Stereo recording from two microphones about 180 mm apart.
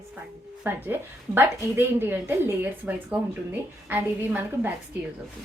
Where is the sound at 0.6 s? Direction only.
10° right (ahead or behind).